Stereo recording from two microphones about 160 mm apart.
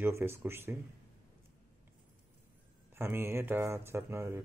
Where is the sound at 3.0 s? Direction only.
15° right (ahead or behind).